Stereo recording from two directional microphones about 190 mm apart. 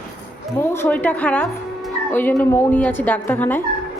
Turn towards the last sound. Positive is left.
turn(degrees=10)  # may be behind; listen again after turning